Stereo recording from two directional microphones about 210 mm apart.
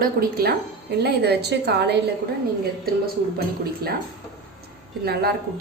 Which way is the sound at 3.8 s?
45° right (ahead or behind).